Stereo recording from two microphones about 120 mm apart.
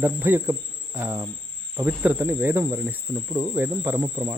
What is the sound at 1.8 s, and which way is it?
Speech, 15° right (ahead or behind).